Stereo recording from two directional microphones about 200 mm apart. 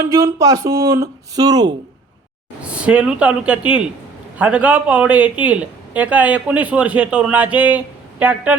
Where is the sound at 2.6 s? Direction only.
5° right (ahead or behind).